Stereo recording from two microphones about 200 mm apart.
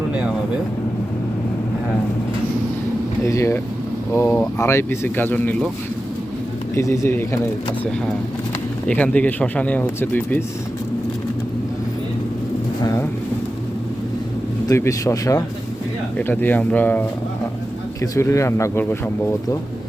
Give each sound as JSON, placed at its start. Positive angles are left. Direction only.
{"t": 3.2, "sound": "speech", "side_deg": 15}
{"t": 6.7, "sound": "speech", "side_deg": 15}
{"t": 8.9, "sound": "speech", "side_deg": 5}
{"t": 12.8, "sound": "speech", "side_deg": 15}
{"t": 14.7, "sound": "speech", "side_deg": 15}